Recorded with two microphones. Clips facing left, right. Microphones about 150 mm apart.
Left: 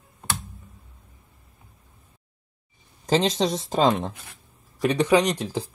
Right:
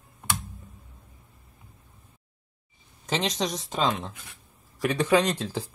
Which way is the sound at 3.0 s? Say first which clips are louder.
Left 6 dB; 35° left (ahead or behind).